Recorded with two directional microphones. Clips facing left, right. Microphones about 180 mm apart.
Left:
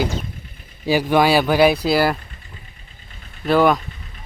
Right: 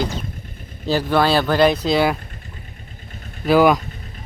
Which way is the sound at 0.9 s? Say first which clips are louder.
Left 2 dB; 10° left (ahead or behind).